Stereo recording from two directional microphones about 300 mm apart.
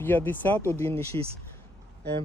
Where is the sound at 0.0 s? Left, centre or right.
Centre.